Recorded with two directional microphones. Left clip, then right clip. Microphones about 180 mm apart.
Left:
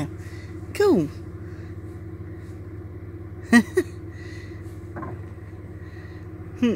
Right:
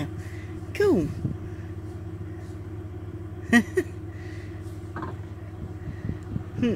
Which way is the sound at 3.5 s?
40° left (ahead or behind).